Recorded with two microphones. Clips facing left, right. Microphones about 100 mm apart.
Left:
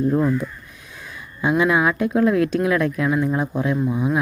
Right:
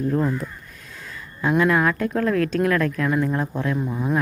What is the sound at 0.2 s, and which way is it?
Speech, 5° left (ahead or behind).